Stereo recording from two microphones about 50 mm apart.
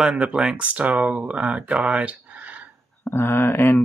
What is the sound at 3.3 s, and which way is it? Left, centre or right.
Speech, left.